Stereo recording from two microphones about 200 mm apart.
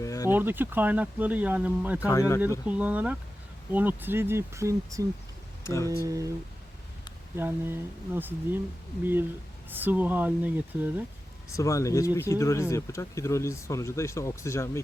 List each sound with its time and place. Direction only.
0.0 s insect: 15° left (ahead or behind)
0.3 s speech: 10° right (ahead or behind)
2.0 s speech: 15° left (ahead or behind)
2.6 s speech: 5° right (ahead or behind)
5.6 s speech: 15° left (ahead or behind)
6.1 s speech: 15° right (ahead or behind)
7.3 s speech: 10° right (ahead or behind)
9.6 s speech: 10° right (ahead or behind)
11.5 s speech: 15° left (ahead or behind)